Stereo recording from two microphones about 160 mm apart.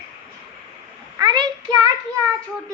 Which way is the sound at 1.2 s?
25° right (ahead or behind).